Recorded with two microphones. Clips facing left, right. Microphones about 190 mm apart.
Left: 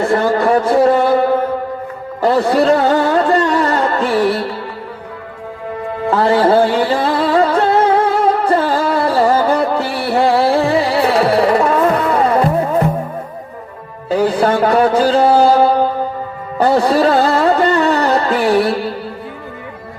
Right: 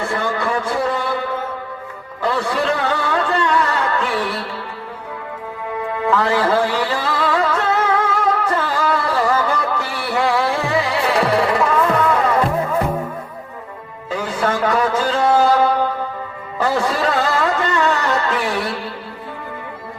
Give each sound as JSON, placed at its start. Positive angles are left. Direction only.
{"t": 0.0, "sound": "a sound", "side_deg": 40}
{"t": 2.2, "sound": "music", "side_deg": 40}
{"t": 6.1, "sound": "music", "side_deg": 35}
{"t": 14.1, "sound": "music", "side_deg": 35}